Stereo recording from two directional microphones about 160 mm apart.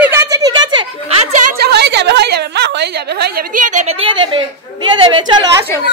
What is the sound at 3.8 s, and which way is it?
A woman's voice, 35° right (ahead or behind).